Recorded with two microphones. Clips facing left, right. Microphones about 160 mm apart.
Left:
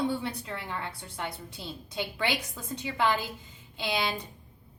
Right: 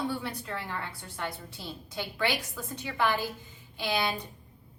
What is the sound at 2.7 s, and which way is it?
A woman's voice, 20° left (ahead or behind).